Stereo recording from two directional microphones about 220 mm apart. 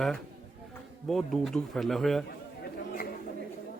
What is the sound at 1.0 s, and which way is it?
Speech, centre (ahead or behind).